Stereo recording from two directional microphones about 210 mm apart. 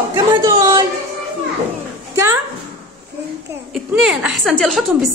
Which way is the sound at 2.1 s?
10° right (ahead or behind).